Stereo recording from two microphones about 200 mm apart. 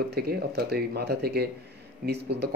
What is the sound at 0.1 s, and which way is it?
Speech, 55° right (ahead or behind).